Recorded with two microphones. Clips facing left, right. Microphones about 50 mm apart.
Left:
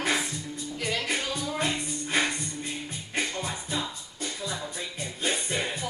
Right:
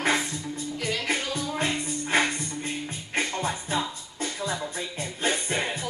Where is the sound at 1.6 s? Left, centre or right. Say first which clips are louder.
Right 2 dB; right.